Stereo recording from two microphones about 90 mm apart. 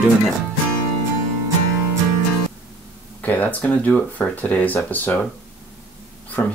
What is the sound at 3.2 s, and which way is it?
Speech, 20° left (ahead or behind).